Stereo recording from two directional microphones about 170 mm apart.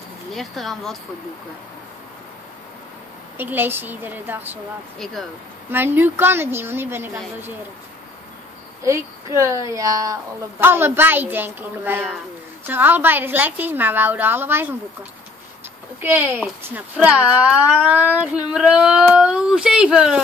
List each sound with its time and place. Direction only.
0.3 s speech: centre (ahead or behind)
3.3 s speech: 10° right (ahead or behind)
4.9 s speech: centre (ahead or behind)
5.7 s speech: 10° right (ahead or behind)
8.8 s speech: 15° right (ahead or behind)
16.0 s speech: 10° right (ahead or behind)